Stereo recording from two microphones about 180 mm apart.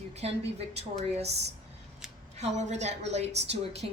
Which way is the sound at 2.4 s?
40° right (ahead or behind).